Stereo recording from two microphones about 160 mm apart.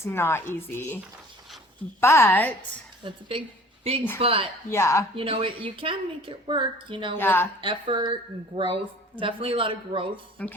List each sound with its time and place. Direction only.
0.0 s speech: 15° left (ahead or behind)
2.0 s speech: 15° left (ahead or behind)
3.0 s a woman's voice: 30° right (ahead or behind)
4.7 s speech: 15° left (ahead or behind)
5.1 s a woman's voice: 35° right (ahead or behind)
7.2 s speech: 15° left (ahead or behind)
7.6 s a woman's voice: 30° right (ahead or behind)
10.4 s speech: 10° left (ahead or behind)